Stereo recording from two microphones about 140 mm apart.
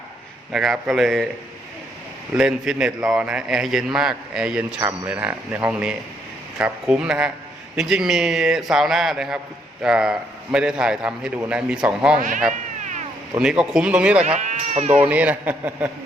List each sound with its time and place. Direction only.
0.5 s a man's voice: centre (ahead or behind)
2.3 s a man's voice: 5° right (ahead or behind)
12.1 s speech: 65° right (ahead or behind)
12.8 s cat: 60° right (ahead or behind)
13.4 s a man's voice: 5° right (ahead or behind)
14.3 s speech: 55° right (ahead or behind)
15.0 s a man's voice: 10° right (ahead or behind)